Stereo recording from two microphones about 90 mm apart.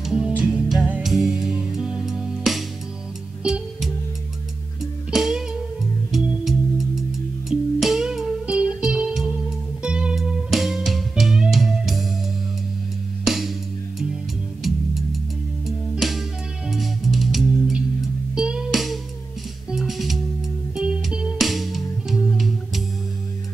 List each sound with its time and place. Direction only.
0.0 s music: 10° right (ahead or behind)
1.0 s music: 5° right (ahead or behind)
5.1 s music: 5° right (ahead or behind)
13.2 s music: centre (ahead or behind)
15.6 s music: centre (ahead or behind)